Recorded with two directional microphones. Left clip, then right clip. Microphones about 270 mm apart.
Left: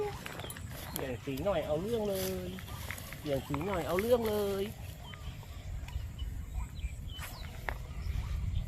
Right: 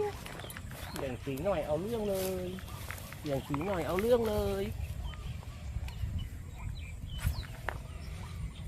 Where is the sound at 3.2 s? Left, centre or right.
Right.